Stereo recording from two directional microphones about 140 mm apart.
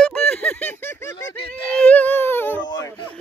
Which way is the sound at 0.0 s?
5° left (ahead or behind).